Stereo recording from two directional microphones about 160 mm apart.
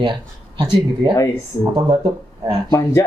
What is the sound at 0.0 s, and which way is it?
Speech, 30° right (ahead or behind).